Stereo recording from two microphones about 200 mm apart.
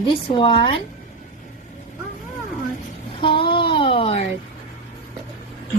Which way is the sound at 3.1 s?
25° left (ahead or behind).